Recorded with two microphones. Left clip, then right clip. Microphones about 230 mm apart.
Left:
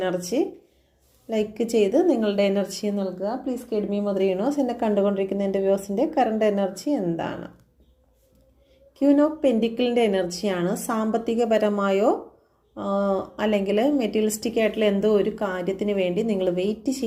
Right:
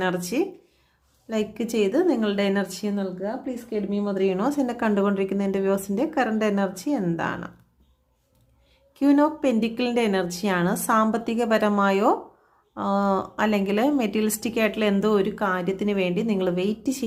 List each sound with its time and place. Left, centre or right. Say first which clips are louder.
0.0 s a woman's voice: left 1 dB; centre
6.7 s a woman's voice: left 1 dB; centre
9.0 s a woman's voice: left 1 dB; centre